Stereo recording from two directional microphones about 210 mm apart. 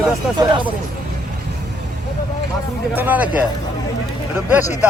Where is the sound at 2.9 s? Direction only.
10° right (ahead or behind).